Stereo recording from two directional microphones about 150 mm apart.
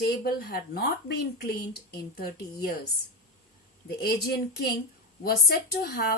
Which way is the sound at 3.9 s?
90° left.